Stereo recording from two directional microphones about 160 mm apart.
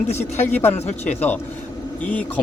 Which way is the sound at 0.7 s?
40° left (ahead or behind).